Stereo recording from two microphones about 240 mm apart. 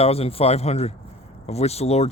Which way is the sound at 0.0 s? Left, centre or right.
Left.